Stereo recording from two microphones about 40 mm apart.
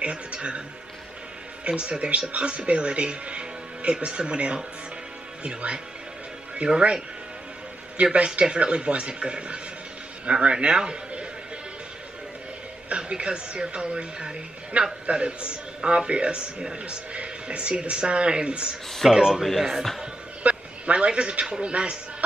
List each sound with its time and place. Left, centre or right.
0.0 s a woman's voice: right
1.7 s a woman's voice: right
8.0 s a woman's voice: right
12.9 s a woman's voice: right
19.1 s speech: centre
20.4 s a man's voice: right